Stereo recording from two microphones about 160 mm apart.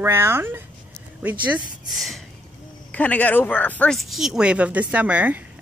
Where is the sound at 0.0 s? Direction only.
15° right (ahead or behind).